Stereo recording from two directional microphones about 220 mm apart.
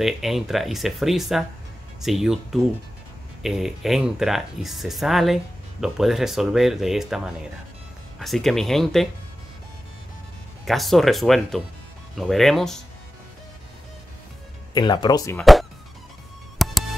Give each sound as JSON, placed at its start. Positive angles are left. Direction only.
{"t": 0.0, "sound": "speech", "side_deg": 0}
{"t": 10.6, "sound": "speech", "side_deg": 0}
{"t": 14.7, "sound": "speech", "side_deg": 20}
{"t": 16.5, "sound": "music", "side_deg": 0}